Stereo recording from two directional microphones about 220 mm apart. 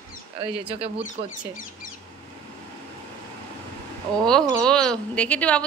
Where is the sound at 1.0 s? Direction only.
35° left (ahead or behind).